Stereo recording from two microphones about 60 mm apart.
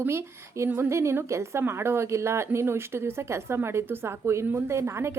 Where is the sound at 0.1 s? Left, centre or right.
Right.